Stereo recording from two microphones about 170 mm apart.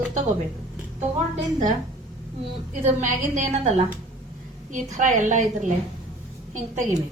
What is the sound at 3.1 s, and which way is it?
A woman's voice, 45° right (ahead or behind).